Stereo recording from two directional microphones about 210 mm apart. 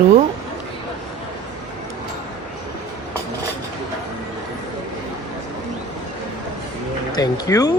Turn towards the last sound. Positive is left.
turn(degrees=15)  # may be behind; listen again after turning